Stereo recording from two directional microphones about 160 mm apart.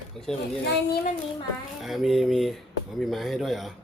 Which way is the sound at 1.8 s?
Centre (ahead or behind).